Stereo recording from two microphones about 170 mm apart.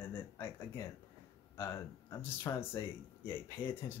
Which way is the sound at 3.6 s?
30° left (ahead or behind).